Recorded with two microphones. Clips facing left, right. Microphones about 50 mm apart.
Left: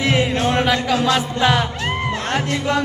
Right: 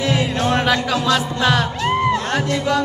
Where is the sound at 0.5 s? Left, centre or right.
Centre.